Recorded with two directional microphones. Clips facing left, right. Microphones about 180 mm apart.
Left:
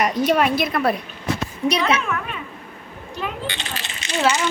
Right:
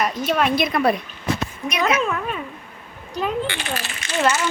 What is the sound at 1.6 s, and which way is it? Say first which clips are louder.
Speech: left 2 dB; 30° left (ahead or behind).